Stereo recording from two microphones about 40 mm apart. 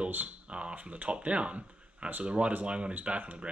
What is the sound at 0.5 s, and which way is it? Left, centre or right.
A man's voice, right.